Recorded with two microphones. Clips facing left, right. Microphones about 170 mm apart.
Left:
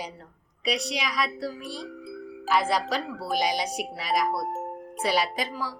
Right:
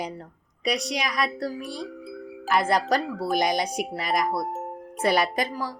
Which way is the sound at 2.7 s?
50° right (ahead or behind).